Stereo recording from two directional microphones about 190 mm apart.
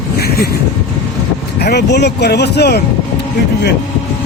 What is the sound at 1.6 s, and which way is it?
Speech, 60° left (ahead or behind).